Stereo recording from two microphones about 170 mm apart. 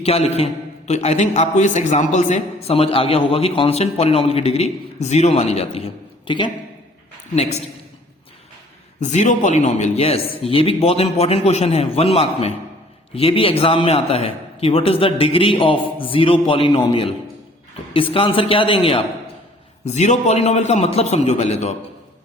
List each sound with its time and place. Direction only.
0.0 s a man's voice: 35° left (ahead or behind)
9.0 s a man's voice: 45° left (ahead or behind)